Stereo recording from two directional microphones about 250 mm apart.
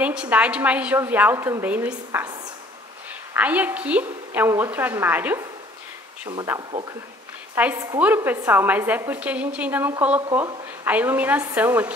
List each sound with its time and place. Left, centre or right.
0.0 s a woman's voice: centre
3.3 s a woman's voice: centre